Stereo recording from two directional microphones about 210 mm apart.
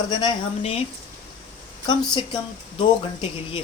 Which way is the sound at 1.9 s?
20° left (ahead or behind).